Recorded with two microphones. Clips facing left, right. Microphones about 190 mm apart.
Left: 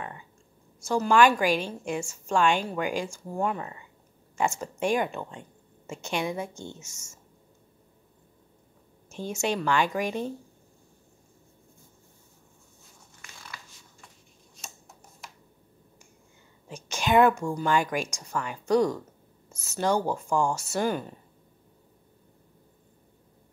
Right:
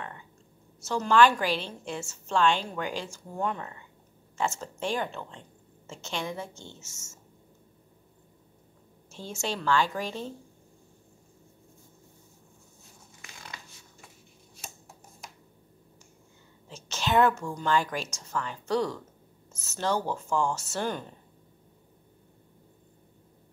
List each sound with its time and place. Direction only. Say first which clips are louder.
0.7 s a woman's voice: left 1 dB; 10° left (ahead or behind)
9.1 s a woman's voice: left 5 dB; 15° left (ahead or behind)
16.6 s a woman's voice: left 3 dB; 15° left (ahead or behind)